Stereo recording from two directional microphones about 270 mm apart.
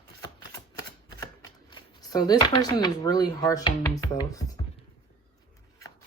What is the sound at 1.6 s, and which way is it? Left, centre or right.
Speech, centre.